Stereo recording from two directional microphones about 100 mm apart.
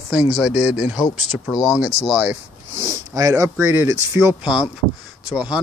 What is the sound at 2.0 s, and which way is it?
Speech, 90° right.